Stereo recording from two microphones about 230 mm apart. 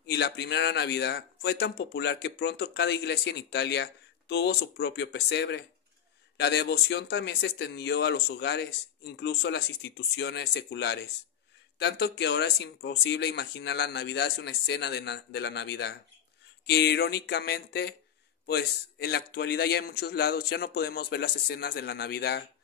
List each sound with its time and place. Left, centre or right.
0.0 s speech: left